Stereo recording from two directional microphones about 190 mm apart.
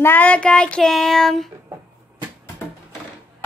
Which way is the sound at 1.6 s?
20° right (ahead or behind).